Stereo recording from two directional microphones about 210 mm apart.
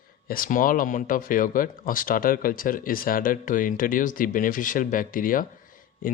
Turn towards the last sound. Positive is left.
turn(degrees=45)  # may be behind; listen again after turning